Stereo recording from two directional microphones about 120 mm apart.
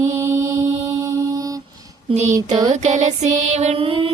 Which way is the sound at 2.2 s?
30° right (ahead or behind).